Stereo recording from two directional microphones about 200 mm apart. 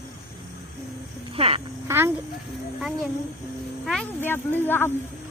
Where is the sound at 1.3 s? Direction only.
30° right (ahead or behind).